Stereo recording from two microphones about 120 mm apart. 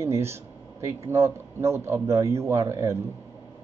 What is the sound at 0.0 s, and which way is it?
Speech, 20° right (ahead or behind).